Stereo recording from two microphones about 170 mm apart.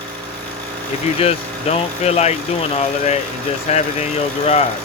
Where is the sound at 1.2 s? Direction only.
35° left (ahead or behind).